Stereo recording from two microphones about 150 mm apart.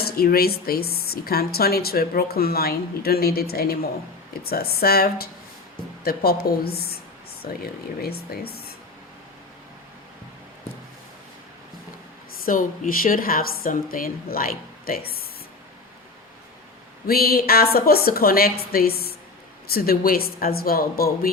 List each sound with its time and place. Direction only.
0.0 s a woman's voice: 90° left
12.5 s a woman's voice: 70° left (ahead or behind); by 15.3 s 85° left
17.1 s a woman's voice: 85° left